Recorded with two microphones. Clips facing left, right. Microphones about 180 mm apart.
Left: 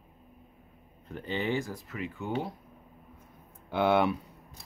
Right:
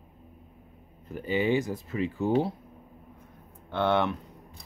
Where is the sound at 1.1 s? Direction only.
5° right (ahead or behind); by 2.5 s 30° right (ahead or behind).